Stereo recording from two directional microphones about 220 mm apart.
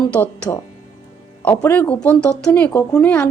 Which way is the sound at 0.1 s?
10° left (ahead or behind).